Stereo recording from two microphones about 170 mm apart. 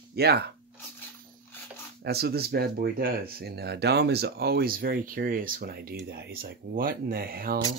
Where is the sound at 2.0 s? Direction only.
70° right (ahead or behind).